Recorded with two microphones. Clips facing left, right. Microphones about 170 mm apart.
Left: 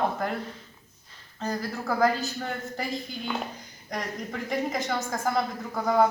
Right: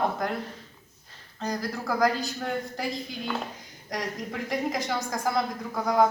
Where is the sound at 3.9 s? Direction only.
Centre (ahead or behind).